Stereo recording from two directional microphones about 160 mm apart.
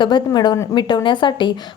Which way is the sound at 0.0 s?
25° left (ahead or behind).